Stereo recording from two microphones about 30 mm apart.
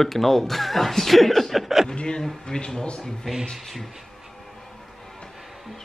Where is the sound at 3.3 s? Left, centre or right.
Centre.